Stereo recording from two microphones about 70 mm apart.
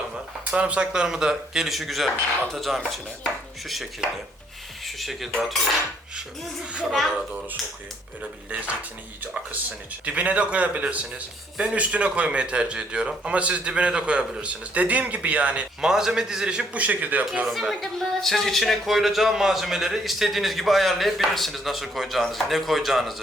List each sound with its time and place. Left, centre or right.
0.5 s speech: centre
4.9 s speech: centre
6.7 s a man's voice: centre
8.4 s a man's voice: centre
17.4 s speech: centre